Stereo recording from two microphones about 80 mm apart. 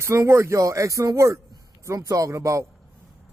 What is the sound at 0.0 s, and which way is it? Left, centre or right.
Speech, right.